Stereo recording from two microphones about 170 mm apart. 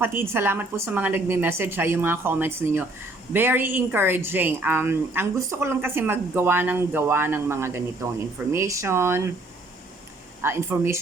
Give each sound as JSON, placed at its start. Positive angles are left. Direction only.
{"t": 0.0, "sound": "a woman's voice", "side_deg": -15}
{"t": 10.4, "sound": "a woman's voice", "side_deg": -15}